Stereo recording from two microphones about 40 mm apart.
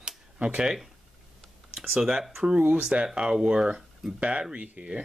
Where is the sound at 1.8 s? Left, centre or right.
Centre.